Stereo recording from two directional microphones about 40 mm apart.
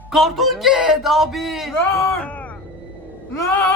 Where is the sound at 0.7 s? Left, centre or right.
Centre.